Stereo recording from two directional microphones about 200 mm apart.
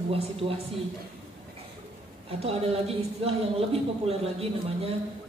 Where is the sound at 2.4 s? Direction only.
30° right (ahead or behind).